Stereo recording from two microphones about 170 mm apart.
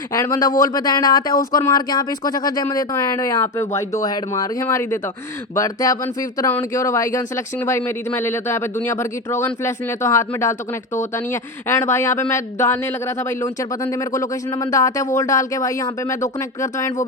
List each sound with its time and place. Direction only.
0.1 s speech: 20° left (ahead or behind)